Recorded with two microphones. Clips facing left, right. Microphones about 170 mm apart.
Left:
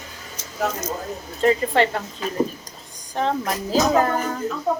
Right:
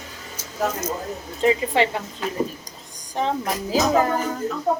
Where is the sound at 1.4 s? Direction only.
15° right (ahead or behind).